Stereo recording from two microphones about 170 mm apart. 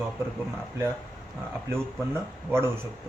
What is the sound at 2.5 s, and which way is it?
Speech, 15° right (ahead or behind).